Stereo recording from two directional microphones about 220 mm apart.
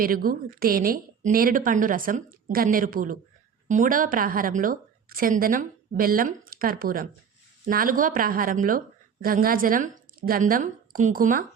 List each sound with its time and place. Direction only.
0.0 s a woman's voice: 40° right (ahead or behind)